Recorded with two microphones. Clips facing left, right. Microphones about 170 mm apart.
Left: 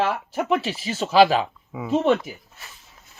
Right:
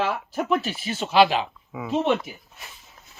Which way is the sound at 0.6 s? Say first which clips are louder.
Left 2 dB; 90° left.